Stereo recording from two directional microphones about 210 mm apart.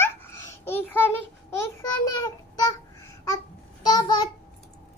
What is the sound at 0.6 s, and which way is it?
Child singing, 10° left (ahead or behind).